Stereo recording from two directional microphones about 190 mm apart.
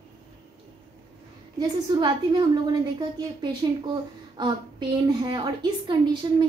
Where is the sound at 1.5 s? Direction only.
20° right (ahead or behind).